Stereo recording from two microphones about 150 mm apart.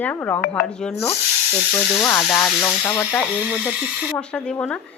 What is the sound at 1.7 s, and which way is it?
Speech, 15° left (ahead or behind).